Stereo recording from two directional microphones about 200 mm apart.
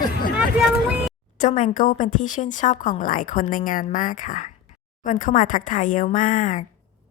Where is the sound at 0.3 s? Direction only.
5° right (ahead or behind).